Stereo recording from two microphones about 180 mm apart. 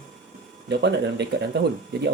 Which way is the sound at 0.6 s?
70° right (ahead or behind).